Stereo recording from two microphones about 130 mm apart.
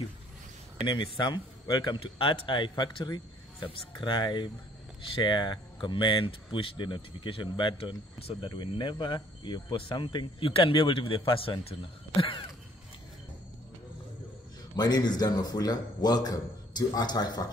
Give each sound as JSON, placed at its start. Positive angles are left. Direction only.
{"t": 0.7, "sound": "speech", "side_deg": 35}
{"t": 14.8, "sound": "a man's voice", "side_deg": 30}